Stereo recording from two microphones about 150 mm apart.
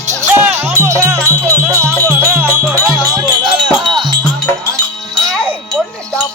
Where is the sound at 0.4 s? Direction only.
15° right (ahead or behind).